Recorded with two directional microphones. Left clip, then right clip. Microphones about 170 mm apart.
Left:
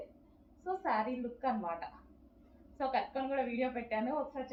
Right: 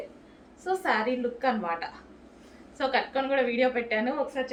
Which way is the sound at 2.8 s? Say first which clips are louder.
Right 8 dB; 30° right (ahead or behind).